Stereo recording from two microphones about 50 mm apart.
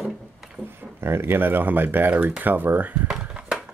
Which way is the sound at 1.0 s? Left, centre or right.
Right.